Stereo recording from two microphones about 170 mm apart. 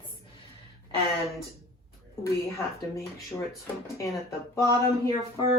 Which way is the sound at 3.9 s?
15° left (ahead or behind).